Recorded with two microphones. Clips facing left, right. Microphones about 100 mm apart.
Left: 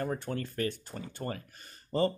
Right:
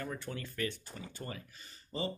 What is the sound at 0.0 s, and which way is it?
Speech, 45° left (ahead or behind).